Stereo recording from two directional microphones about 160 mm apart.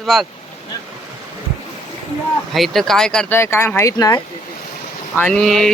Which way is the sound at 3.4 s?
15° left (ahead or behind).